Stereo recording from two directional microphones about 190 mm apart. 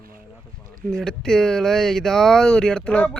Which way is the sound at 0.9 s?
Centre (ahead or behind).